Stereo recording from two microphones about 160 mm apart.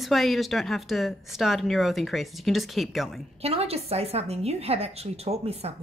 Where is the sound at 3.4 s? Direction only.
40° right (ahead or behind).